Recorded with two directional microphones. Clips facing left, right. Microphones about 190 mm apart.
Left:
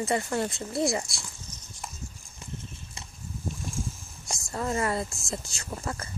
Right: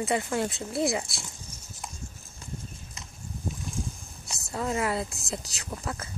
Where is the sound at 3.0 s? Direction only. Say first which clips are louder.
Left 2 dB; 30° left (ahead or behind).